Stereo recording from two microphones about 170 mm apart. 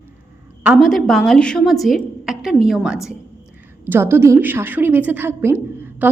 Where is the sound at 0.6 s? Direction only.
5° right (ahead or behind).